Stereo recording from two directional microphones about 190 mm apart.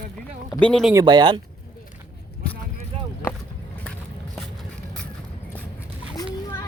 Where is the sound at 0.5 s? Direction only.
5° left (ahead or behind).